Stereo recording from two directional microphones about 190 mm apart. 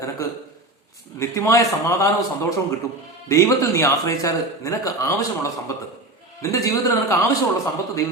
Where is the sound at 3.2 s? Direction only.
15° left (ahead or behind).